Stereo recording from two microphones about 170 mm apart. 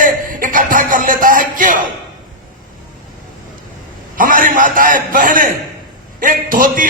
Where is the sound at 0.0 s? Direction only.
50° right (ahead or behind).